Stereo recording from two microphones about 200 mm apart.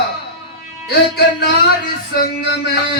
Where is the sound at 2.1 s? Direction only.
55° left (ahead or behind).